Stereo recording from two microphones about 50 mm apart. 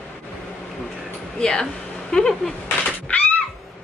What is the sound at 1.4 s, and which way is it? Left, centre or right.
Speech, centre.